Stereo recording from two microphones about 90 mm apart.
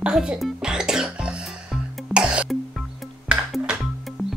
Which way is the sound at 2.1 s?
10° right (ahead or behind).